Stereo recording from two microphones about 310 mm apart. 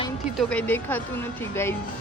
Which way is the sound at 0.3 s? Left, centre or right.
Centre.